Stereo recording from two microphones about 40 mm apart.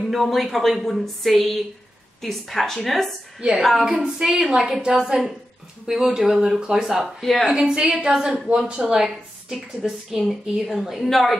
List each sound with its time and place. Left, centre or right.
0.0 s a woman's voice: centre
3.3 s a woman's voice: centre
7.2 s a woman's voice: centre
7.4 s a woman's voice: right; by 11.3 s centre